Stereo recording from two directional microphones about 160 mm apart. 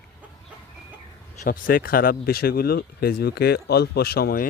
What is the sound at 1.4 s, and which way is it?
Speech, 60° left (ahead or behind).